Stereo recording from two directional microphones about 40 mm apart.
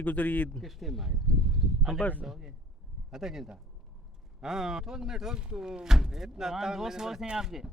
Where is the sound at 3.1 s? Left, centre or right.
Centre.